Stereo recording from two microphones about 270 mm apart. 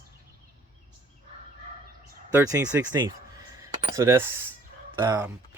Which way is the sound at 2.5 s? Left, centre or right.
Centre.